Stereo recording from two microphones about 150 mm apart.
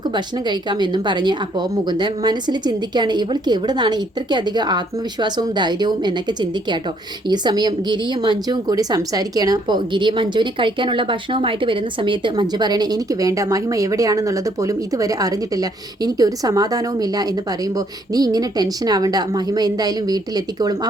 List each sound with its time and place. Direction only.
0.1 s speech: 30° right (ahead or behind)